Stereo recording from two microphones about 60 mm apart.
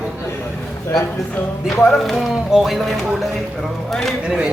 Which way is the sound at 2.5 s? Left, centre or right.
Centre.